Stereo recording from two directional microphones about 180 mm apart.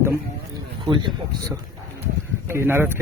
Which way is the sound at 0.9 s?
25° right (ahead or behind).